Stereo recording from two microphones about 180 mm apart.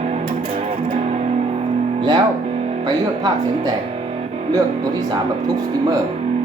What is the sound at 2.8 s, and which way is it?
Speech, 20° right (ahead or behind).